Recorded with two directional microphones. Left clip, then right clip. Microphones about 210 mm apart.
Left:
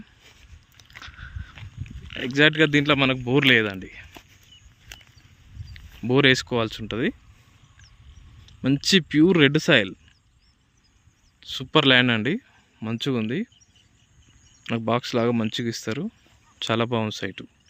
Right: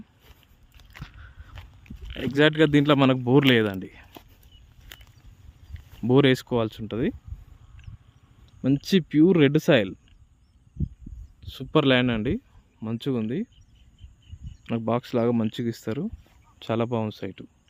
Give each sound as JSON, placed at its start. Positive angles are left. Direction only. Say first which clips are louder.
{"t": 0.0, "sound": "biting", "louder": "left 4 dB", "side_deg": -5}
{"t": 2.1, "sound": "speech", "louder": "left 2 dB", "side_deg": -15}
{"t": 5.7, "sound": "speech", "louder": "right 1 dB", "side_deg": -15}
{"t": 8.4, "sound": "speech", "louder": "left 3 dB", "side_deg": 0}
{"t": 11.3, "sound": "speech", "louder": "left 3 dB", "side_deg": 0}
{"t": 14.6, "sound": "speech", "louder": "left 2 dB", "side_deg": 0}